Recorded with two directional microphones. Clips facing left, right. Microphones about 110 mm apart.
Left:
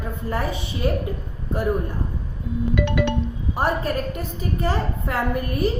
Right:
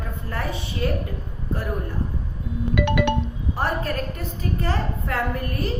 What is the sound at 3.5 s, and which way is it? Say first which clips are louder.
A woman's voice: left 3 dB; 15° left (ahead or behind).